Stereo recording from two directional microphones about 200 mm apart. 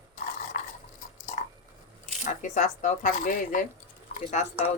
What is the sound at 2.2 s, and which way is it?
Speech, 35° left (ahead or behind).